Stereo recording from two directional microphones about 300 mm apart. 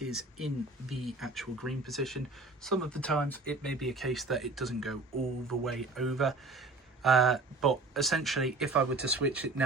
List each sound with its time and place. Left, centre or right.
0.1 s speech: centre